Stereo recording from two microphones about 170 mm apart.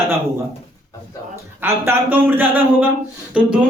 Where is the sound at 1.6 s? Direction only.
10° right (ahead or behind).